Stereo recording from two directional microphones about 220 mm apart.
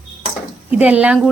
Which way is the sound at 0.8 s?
5° right (ahead or behind).